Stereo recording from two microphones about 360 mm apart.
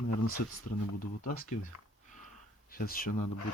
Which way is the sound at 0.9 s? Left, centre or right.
Left.